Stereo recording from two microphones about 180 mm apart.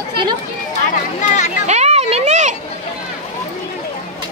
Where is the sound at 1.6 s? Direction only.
40° right (ahead or behind).